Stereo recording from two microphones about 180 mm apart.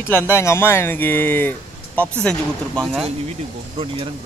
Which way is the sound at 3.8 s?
30° right (ahead or behind).